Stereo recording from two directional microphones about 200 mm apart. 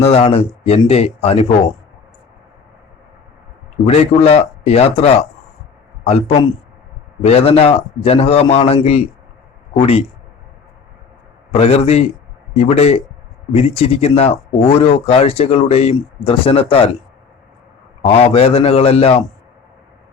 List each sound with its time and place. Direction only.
0.0 s speech: 30° left (ahead or behind)
3.8 s speech: 30° left (ahead or behind)
11.5 s speech: 30° left (ahead or behind)
18.0 s speech: 30° left (ahead or behind)